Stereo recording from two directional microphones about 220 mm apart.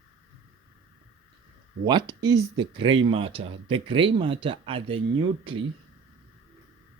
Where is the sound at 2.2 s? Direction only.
20° right (ahead or behind).